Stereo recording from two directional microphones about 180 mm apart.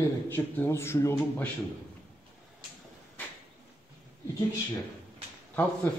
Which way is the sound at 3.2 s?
10° left (ahead or behind).